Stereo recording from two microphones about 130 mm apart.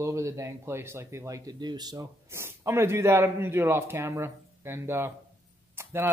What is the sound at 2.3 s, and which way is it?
Speech, 20° right (ahead or behind).